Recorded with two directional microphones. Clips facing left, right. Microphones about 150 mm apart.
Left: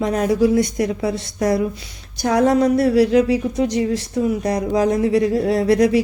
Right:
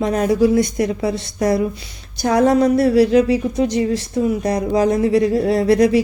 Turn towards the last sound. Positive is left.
turn(degrees=-30)  # may be behind; listen again after turning